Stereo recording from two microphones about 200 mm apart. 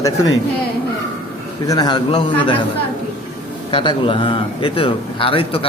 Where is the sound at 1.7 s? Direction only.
20° left (ahead or behind).